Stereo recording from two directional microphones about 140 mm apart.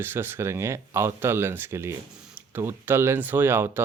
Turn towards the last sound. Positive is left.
turn(degrees=-15)  # may be behind; listen again after turning